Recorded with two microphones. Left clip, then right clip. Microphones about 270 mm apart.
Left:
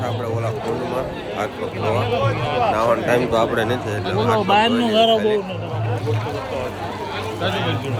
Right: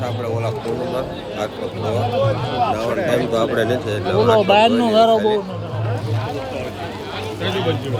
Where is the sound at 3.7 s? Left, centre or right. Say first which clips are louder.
Right 4 dB; centre.